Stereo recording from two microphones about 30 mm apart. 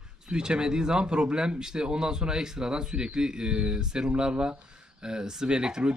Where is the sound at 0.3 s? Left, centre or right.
Right.